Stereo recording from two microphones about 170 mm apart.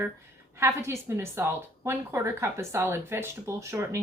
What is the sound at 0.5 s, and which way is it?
A woman's voice, 15° right (ahead or behind).